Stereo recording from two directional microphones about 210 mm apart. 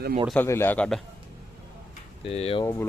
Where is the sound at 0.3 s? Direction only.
10° left (ahead or behind).